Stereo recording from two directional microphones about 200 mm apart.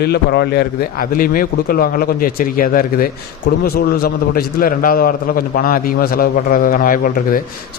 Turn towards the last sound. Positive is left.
turn(degrees=45)  # may be behind; listen again after turning